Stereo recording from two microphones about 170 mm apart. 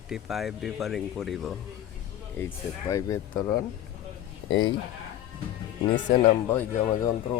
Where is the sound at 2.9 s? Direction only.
20° left (ahead or behind).